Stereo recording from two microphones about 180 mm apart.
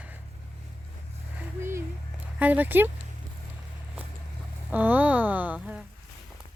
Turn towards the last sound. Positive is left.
turn(degrees=-5)  # may be behind; listen again after turning